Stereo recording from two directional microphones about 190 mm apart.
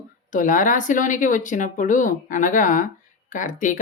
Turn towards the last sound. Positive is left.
turn(degrees=45)  # may be behind; listen again after turning